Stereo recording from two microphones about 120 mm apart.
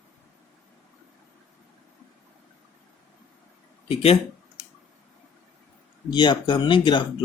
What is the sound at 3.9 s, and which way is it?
Speech, 55° left (ahead or behind).